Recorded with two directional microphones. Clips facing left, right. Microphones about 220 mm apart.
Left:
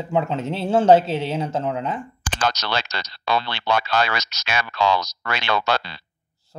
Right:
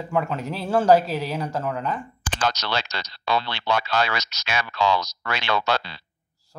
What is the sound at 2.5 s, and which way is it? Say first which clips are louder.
Speech: left 1 dB; 75° left (ahead or behind).